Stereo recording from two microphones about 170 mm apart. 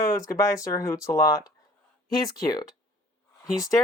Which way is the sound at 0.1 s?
20° left (ahead or behind).